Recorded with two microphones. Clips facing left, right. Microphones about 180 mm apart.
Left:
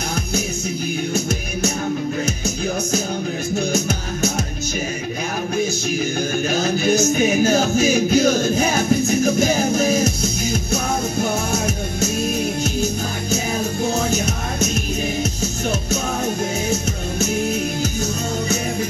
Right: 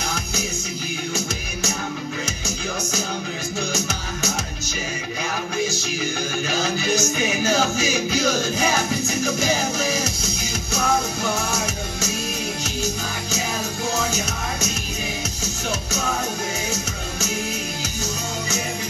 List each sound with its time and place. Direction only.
2.2 s music: 55° left (ahead or behind)
6.5 s music: 55° left (ahead or behind)